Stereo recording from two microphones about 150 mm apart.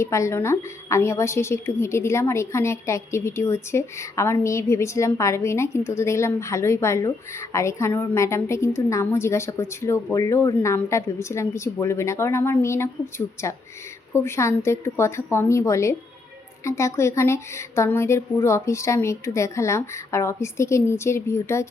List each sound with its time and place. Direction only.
0.0 s a woman's voice: 20° left (ahead or behind)